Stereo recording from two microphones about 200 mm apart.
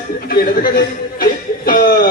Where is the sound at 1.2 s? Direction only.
45° left (ahead or behind).